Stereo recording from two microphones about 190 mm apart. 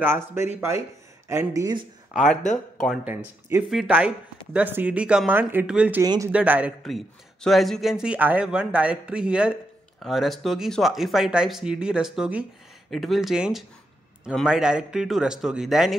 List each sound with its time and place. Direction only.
0.0 s speech: 10° right (ahead or behind)
3.7 s a man's voice: 5° right (ahead or behind)
6.0 s speech: 20° right (ahead or behind)
6.3 s a man's voice: 5° right (ahead or behind)